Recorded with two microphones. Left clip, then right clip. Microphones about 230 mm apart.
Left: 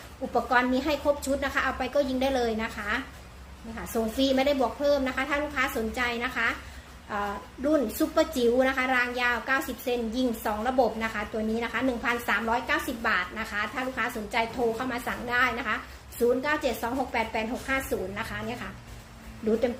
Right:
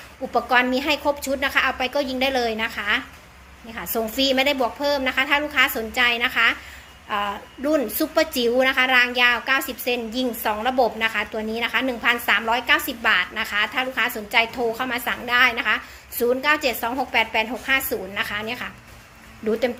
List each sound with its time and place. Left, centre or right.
0.3 s a woman's voice: right
4.2 s a woman's voice: right